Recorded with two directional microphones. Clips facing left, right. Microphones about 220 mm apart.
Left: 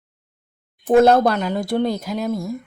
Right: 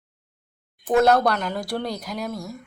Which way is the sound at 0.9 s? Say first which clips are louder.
Left 5 dB; 25° left (ahead or behind).